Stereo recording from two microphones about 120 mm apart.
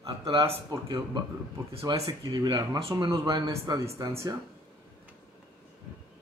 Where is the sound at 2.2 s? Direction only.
35° right (ahead or behind).